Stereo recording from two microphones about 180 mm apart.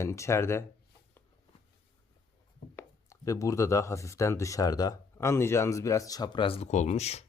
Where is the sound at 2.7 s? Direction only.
15° left (ahead or behind); by 7.2 s 35° left (ahead or behind).